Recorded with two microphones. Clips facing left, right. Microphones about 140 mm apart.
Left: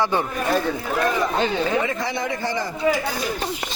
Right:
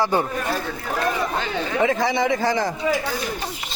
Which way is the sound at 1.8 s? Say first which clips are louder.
Right 5 dB; 90° right.